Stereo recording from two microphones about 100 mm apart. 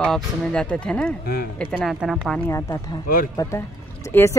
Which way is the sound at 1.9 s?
Centre (ahead or behind).